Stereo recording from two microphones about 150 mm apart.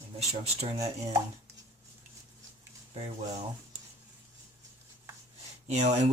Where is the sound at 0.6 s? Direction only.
45° right (ahead or behind).